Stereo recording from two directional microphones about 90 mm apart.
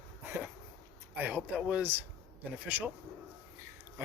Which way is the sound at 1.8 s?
20° right (ahead or behind).